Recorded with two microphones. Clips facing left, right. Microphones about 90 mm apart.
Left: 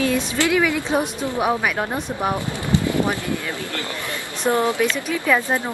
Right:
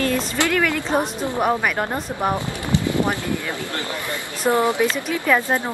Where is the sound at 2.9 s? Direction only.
20° right (ahead or behind).